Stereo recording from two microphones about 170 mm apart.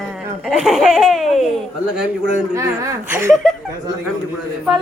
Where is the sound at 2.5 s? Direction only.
15° right (ahead or behind).